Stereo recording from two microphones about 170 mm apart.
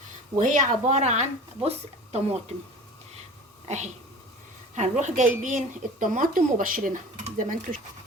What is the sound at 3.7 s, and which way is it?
Speech, 40° right (ahead or behind).